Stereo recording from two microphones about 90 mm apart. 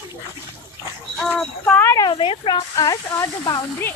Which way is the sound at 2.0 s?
80° left.